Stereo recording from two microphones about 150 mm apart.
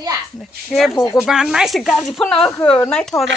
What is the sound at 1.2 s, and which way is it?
Speech, 5° right (ahead or behind).